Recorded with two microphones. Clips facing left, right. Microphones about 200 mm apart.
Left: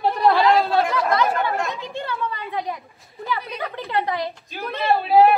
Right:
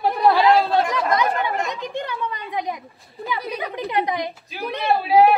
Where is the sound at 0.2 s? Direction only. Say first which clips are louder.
Right 1 dB; 15° right (ahead or behind).